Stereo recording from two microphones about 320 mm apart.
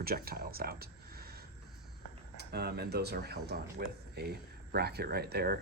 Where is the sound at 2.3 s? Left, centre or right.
Right.